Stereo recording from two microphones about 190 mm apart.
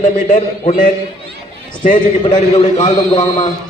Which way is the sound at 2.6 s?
35° left (ahead or behind).